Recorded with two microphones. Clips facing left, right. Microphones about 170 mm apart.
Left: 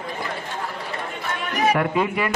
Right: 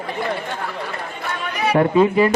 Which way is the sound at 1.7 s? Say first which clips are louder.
Right 7 dB; 30° right (ahead or behind).